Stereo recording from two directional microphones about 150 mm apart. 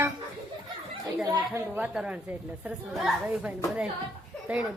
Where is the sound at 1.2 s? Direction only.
25° right (ahead or behind).